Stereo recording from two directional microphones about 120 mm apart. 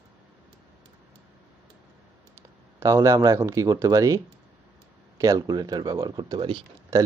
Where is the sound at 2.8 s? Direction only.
25° right (ahead or behind).